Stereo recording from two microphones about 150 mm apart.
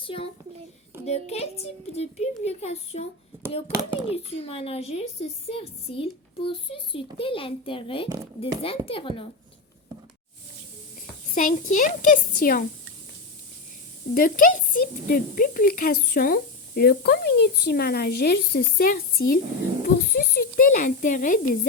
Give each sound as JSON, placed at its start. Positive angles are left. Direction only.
{"t": 0.0, "sound": "a child's voice", "side_deg": 35}
{"t": 4.1, "sound": "a woman's voice", "side_deg": 40}
{"t": 11.3, "sound": "speech", "side_deg": 60}
{"t": 14.1, "sound": "speech", "side_deg": 65}
{"t": 19.8, "sound": "speech", "side_deg": 85}